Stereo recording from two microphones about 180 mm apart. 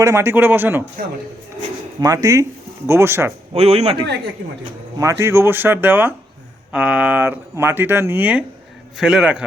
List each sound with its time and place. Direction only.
0.0 s speech: 15° right (ahead or behind)
2.0 s speech: 20° right (ahead or behind)
3.5 s a man's voice: 35° right (ahead or behind)
4.4 s a man's voice: 60° right (ahead or behind)
4.9 s a man's voice: 15° right (ahead or behind)